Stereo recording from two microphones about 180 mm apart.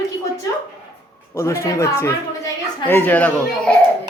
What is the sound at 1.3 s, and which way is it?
A woman's voice, 15° left (ahead or behind).